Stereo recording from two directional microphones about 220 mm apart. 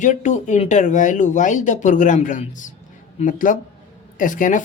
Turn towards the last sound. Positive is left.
turn(degrees=35)  # may be behind; listen again after turning